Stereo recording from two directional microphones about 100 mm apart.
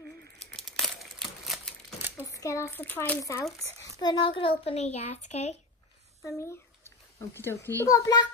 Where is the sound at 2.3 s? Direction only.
30° left (ahead or behind); by 3.2 s 15° left (ahead or behind).